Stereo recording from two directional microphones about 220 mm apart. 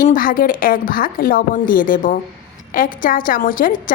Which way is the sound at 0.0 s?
40° left (ahead or behind).